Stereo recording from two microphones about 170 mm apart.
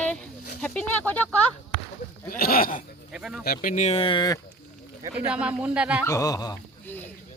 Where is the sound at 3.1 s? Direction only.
5° right (ahead or behind).